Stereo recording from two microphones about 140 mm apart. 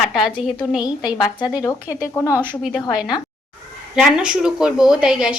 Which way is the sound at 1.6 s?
20° left (ahead or behind).